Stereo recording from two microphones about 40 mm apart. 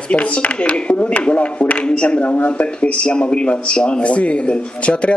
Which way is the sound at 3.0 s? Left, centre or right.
Left.